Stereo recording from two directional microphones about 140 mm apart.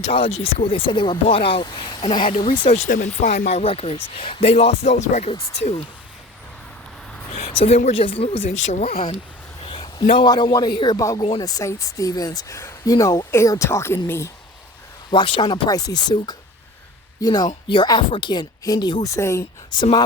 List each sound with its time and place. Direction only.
0.0 s speech: 45° left (ahead or behind)
2.6 s speech: 55° left (ahead or behind)
7.4 s a sound: 45° left (ahead or behind)
7.9 s speech: 40° left (ahead or behind)
9.6 s a sound: 35° left (ahead or behind)
10.2 s speech: 30° left (ahead or behind)
15.1 s speech: 35° left (ahead or behind)
19.7 s speech: 35° left (ahead or behind)